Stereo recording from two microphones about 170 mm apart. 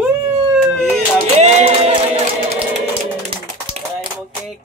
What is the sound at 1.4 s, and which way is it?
Music, 40° right (ahead or behind).